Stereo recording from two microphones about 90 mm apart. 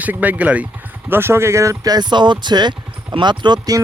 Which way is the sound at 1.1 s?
25° right (ahead or behind).